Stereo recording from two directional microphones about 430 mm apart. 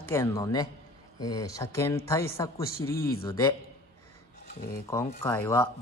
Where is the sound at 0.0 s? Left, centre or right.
Centre.